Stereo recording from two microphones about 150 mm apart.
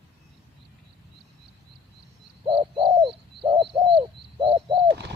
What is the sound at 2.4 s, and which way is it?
Bird, 35° right (ahead or behind).